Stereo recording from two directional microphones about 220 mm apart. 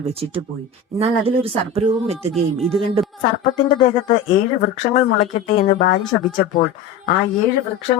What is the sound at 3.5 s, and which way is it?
Speech, 25° left (ahead or behind).